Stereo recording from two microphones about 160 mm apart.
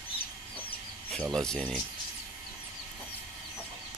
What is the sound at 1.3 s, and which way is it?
Speech, 5° left (ahead or behind).